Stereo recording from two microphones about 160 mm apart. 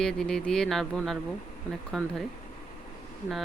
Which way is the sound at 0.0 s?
5° left (ahead or behind).